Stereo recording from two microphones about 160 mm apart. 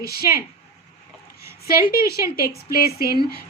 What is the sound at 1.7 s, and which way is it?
A woman's voice, 70° left (ahead or behind).